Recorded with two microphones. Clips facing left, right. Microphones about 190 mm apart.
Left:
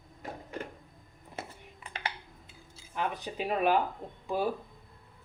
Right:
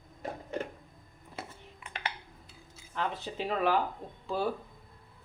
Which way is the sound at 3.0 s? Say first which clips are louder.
Left 1 dB; 15° left (ahead or behind).